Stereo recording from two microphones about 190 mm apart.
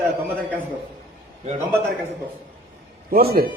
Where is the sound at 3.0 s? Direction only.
50° right (ahead or behind).